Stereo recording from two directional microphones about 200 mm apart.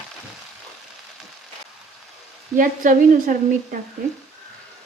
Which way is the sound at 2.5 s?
40° right (ahead or behind).